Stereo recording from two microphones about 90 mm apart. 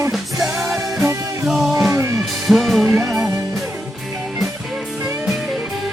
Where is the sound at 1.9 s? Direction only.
30° right (ahead or behind).